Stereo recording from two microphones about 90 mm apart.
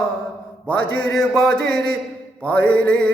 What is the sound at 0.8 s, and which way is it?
Mantra, 55° left (ahead or behind).